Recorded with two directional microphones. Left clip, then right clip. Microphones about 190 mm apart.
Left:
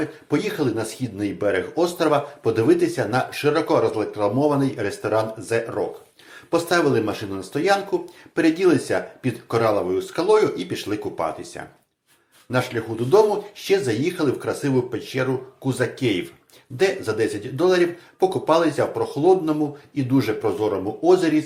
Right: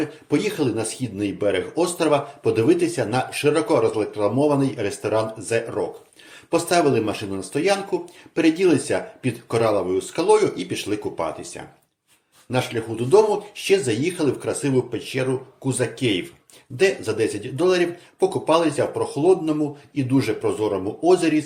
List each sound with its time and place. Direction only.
0.0 s speech: 25° right (ahead or behind)